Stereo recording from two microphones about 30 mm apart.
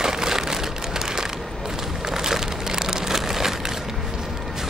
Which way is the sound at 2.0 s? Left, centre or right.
Centre.